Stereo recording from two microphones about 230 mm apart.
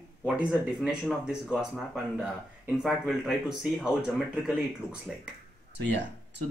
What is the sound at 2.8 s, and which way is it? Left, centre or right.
Speech, centre.